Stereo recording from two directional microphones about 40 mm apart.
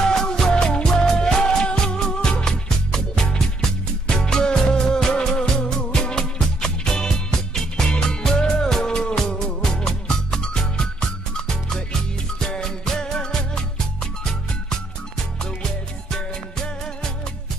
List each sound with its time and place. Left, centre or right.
0.1 s music: centre
2.9 s music: centre
16.1 s music: centre